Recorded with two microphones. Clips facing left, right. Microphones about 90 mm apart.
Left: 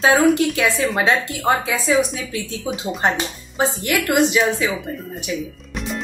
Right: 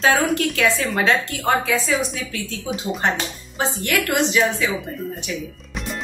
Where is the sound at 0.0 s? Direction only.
10° left (ahead or behind).